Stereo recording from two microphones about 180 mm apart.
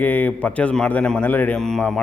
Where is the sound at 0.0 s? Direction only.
10° left (ahead or behind).